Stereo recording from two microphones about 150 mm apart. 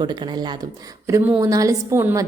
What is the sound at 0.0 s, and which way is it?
Speech, 30° right (ahead or behind).